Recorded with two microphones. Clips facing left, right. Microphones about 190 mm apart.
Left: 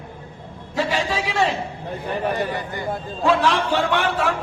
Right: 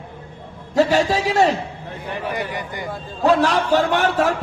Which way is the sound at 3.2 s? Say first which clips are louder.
Right 3 dB; 40° right (ahead or behind).